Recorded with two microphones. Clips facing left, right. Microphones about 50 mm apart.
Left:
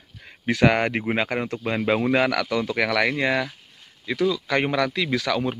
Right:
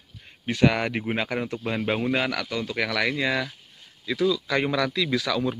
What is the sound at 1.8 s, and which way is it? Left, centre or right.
Speech, left.